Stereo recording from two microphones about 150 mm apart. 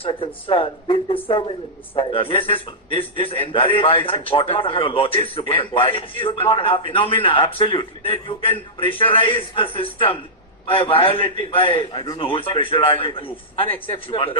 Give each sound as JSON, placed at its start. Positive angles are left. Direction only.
{"t": 0.0, "sound": "a man's voice", "side_deg": 35}